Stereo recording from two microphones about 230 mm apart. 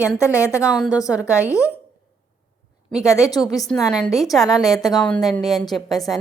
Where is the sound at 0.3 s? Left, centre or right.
Centre.